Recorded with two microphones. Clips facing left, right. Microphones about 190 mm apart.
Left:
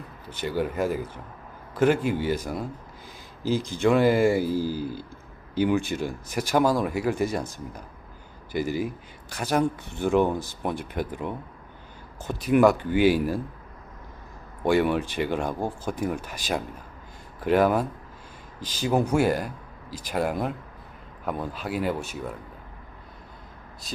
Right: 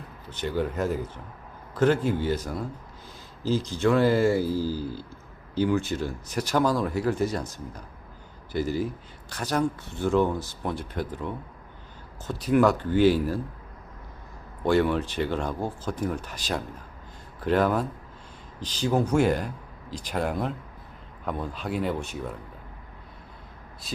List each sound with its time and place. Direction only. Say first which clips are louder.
0.3 s speech: left 1 dB; 10° left (ahead or behind)
3.7 s speech: left 2 dB; 15° left (ahead or behind)
14.6 s speech: left 1 dB; 10° left (ahead or behind)